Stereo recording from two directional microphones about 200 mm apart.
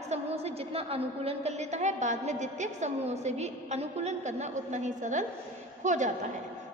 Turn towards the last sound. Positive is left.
turn(degrees=-40)  # may be behind; listen again after turning